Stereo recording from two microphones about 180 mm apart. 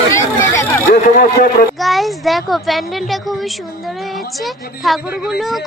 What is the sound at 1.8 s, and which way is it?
A woman's voice, centre (ahead or behind).